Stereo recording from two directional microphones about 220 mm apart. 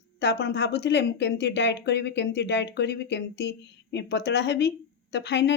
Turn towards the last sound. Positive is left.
turn(degrees=50)  # may be behind; listen again after turning